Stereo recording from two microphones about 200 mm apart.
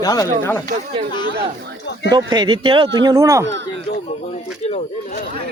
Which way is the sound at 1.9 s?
60° left (ahead or behind).